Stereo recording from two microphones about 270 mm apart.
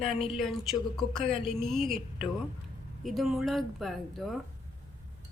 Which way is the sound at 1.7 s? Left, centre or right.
Centre.